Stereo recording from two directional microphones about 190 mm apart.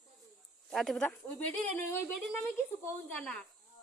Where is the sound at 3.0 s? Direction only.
5° left (ahead or behind).